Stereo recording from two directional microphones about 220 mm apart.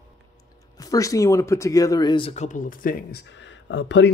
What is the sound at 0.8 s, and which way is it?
Speech, 15° left (ahead or behind).